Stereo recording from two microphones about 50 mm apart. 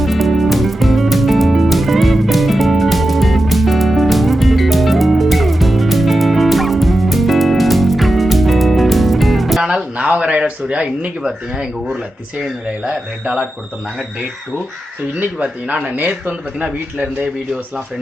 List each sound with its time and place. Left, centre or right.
0.0 s music: centre
9.6 s a sound: centre
12.8 s speech: centre
15.2 s speech: right